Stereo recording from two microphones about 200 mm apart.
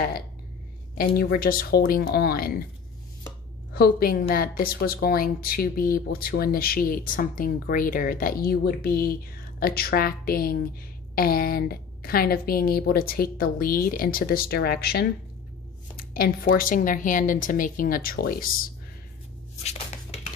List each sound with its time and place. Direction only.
0.9 s speech: 45° left (ahead or behind)
3.7 s speech: 50° left (ahead or behind)
16.1 s speech: 45° left (ahead or behind)
19.6 s a sound: 30° left (ahead or behind)